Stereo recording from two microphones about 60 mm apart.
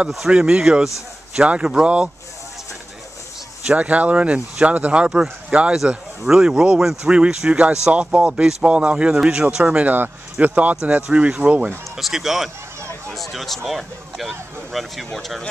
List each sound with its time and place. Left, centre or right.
0.3 s speech: centre
3.6 s speech: right
9.8 s speech: right
12.0 s speech: centre